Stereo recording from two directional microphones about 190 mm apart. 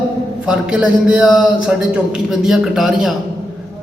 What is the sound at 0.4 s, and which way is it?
Mantra, 5° right (ahead or behind).